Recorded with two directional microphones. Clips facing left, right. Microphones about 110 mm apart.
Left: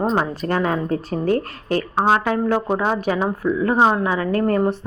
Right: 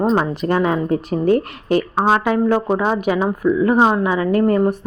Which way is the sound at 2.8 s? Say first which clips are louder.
Right 2 dB; 15° right (ahead or behind).